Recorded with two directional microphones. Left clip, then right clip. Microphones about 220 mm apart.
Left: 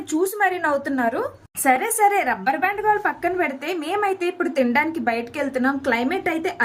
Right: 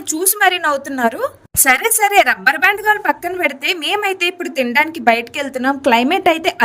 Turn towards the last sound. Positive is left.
turn(degrees=-40)  # may be behind; listen again after turning